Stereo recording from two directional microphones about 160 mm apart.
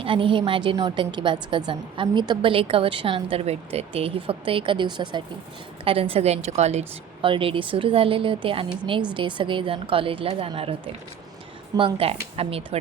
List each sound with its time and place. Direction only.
0.0 s a woman's voice: 35° right (ahead or behind)
11.8 s a woman's voice: 35° right (ahead or behind)